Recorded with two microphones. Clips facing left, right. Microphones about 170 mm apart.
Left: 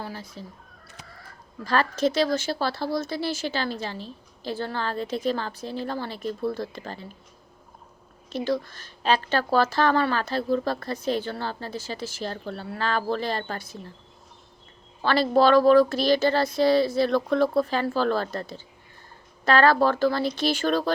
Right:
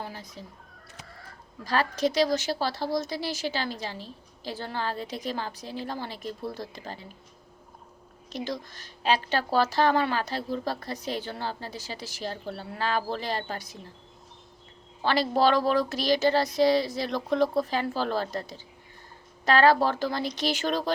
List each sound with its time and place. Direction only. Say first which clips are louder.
0.0 s a sound: left 3 dB; 15° right (ahead or behind)
1.6 s a woman's voice: left 3 dB; 15° right (ahead or behind)
8.3 s a woman's voice: left 7 dB; 15° right (ahead or behind)
15.0 s a woman's voice: left 3 dB; 15° right (ahead or behind)